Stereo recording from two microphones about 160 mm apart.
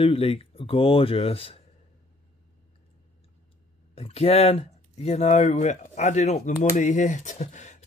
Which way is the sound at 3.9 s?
40° left (ahead or behind).